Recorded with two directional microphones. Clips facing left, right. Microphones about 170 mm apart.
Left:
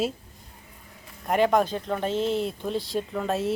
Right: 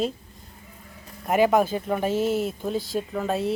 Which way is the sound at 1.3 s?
5° right (ahead or behind).